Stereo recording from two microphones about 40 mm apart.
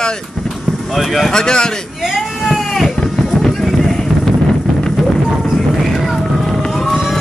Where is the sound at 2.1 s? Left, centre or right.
Centre.